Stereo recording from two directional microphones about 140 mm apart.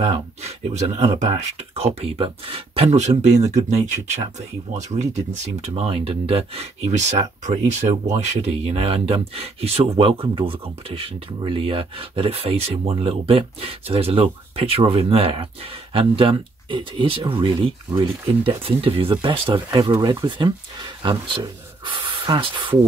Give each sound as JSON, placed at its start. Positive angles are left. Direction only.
{"t": 0.0, "sound": "speech", "side_deg": -50}
{"t": 19.8, "sound": "speech", "side_deg": -30}